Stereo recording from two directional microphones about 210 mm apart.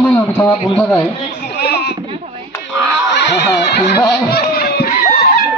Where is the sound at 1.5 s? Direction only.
50° left (ahead or behind).